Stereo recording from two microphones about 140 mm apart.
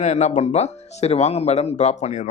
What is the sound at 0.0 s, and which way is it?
Speech, 55° left (ahead or behind).